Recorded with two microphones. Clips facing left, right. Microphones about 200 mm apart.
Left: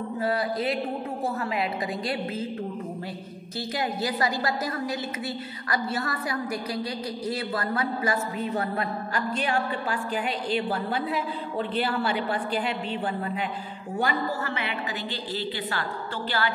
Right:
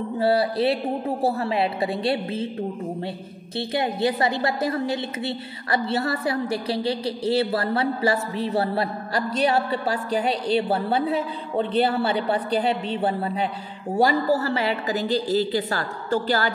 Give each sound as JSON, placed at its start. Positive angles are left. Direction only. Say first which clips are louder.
{"t": 0.2, "sound": "a woman's voice", "louder": "right 7 dB", "side_deg": -30}
{"t": 3.5, "sound": "a woman's voice", "louder": "right 5 dB", "side_deg": -25}